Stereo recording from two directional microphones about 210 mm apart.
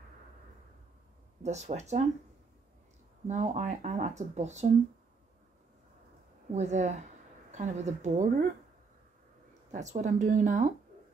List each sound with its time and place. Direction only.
1.4 s speech: 35° right (ahead or behind)
3.3 s speech: 35° right (ahead or behind)
6.5 s speech: 35° right (ahead or behind)
9.7 s speech: 35° right (ahead or behind)